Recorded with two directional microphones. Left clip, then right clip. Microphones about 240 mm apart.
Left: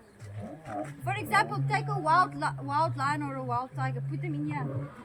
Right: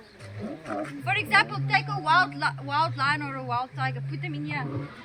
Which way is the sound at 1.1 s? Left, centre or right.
Centre.